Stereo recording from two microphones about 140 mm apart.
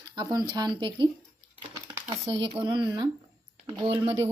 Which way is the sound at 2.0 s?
35° right (ahead or behind).